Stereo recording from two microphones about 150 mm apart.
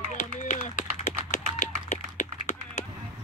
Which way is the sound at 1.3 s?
50° left (ahead or behind).